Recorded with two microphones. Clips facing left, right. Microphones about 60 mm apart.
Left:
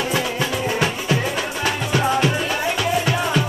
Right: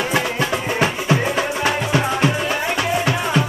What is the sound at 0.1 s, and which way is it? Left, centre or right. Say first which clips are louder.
Music: right 2 dB; right.